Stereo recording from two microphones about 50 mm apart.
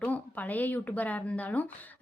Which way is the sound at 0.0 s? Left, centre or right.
Left.